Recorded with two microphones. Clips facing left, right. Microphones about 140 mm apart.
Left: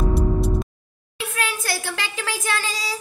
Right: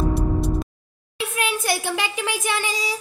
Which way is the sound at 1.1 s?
20° right (ahead or behind).